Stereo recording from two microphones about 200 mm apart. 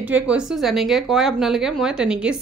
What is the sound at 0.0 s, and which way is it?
Speech, 5° right (ahead or behind).